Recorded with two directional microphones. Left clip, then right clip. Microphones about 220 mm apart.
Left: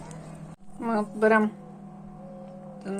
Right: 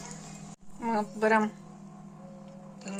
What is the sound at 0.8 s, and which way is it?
Speech, centre (ahead or behind).